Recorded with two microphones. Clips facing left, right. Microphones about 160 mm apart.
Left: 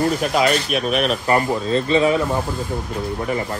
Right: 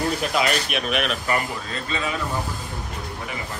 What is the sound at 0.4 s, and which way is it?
Speech, 40° left (ahead or behind).